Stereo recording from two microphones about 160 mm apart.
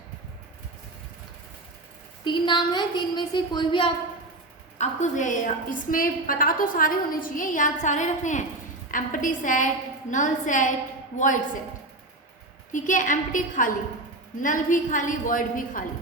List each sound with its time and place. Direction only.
2.2 s a woman's voice: 30° left (ahead or behind)
4.8 s a woman's voice: 50° left (ahead or behind)
12.7 s a woman's voice: 50° left (ahead or behind)